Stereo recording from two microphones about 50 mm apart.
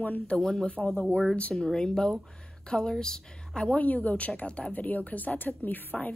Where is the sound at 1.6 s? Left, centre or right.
Centre.